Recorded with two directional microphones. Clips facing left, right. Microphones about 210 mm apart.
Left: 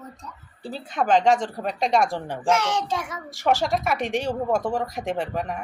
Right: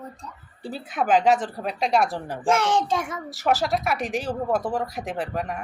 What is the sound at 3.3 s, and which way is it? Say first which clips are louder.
A woman's voice: left 1 dB; 5° right (ahead or behind).